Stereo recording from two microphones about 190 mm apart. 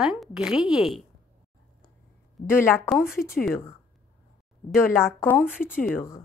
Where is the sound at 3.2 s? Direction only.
50° left (ahead or behind).